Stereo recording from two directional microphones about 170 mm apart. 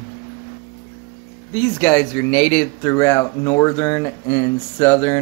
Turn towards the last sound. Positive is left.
turn(degrees=15)  # may be behind; listen again after turning